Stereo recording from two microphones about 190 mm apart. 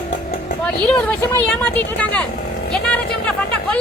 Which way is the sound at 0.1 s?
50° left (ahead or behind).